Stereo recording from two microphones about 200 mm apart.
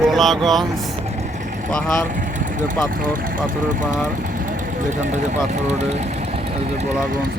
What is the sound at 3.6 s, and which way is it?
Speech, 40° right (ahead or behind).